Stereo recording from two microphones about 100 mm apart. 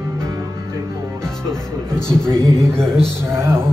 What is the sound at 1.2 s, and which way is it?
Music, 5° left (ahead or behind).